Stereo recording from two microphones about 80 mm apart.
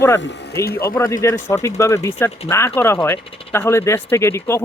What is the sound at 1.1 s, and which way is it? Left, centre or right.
Speech, left.